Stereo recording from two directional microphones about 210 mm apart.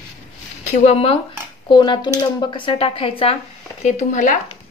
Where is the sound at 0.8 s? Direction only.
30° left (ahead or behind).